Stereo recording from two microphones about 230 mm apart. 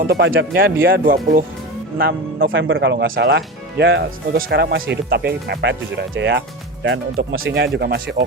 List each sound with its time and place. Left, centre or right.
0.0 s speech: right
2.5 s speech: right
4.4 s speech: right
7.8 s speech: right